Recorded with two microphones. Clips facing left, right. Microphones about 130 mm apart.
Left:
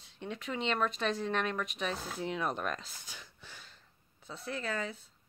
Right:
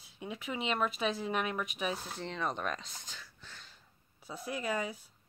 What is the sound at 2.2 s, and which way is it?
Speech, 5° left (ahead or behind).